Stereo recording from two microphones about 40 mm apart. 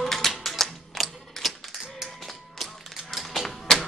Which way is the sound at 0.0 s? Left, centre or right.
Centre.